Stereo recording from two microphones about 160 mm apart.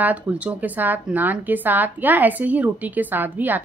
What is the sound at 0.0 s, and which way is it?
A woman's voice, 10° right (ahead or behind).